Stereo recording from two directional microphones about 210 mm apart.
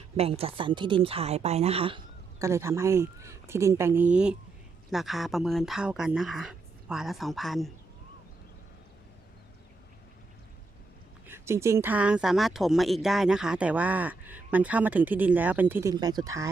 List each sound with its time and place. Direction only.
0.2 s a woman's voice: 30° right (ahead or behind)
2.4 s speech: 15° right (ahead or behind)
11.3 s speech: 15° right (ahead or behind)